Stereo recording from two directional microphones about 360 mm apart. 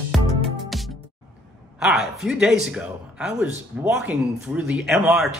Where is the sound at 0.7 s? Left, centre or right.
Centre.